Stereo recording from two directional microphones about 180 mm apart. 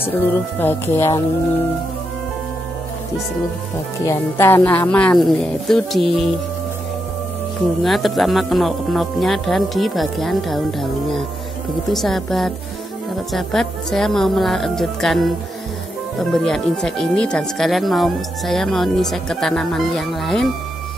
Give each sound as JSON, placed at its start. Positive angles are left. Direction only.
{"t": 0.6, "sound": "speech", "side_deg": 10}
{"t": 4.0, "sound": "speech", "side_deg": 15}
{"t": 7.8, "sound": "speech", "side_deg": 0}